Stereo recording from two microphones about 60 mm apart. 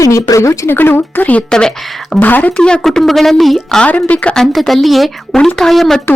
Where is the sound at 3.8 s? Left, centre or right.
Left.